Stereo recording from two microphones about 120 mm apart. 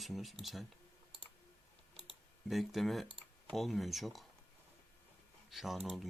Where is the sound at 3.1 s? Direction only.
45° right (ahead or behind).